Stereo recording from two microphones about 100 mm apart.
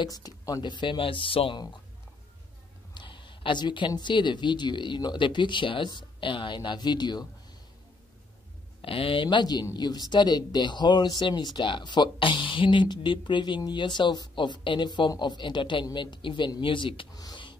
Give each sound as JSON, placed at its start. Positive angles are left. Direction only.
{"t": 0.0, "sound": "speech", "side_deg": 40}
{"t": 2.9, "sound": "a woman's voice", "side_deg": 50}
{"t": 8.8, "sound": "a woman's voice", "side_deg": 65}
{"t": 17.1, "sound": "speech", "side_deg": 40}